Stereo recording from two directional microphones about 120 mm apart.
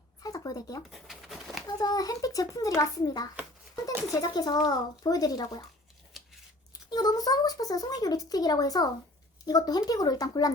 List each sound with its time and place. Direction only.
0.2 s a sound: 30° left (ahead or behind)
0.9 s bird: centre (ahead or behind)
1.6 s speech: 30° left (ahead or behind)
6.1 s scissors: centre (ahead or behind)
6.7 s speech: 35° left (ahead or behind)